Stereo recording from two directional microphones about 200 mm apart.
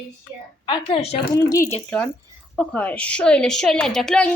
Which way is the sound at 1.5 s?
15° left (ahead or behind).